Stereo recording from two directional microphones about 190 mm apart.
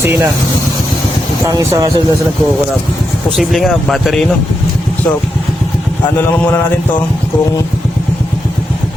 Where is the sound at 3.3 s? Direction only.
Centre (ahead or behind).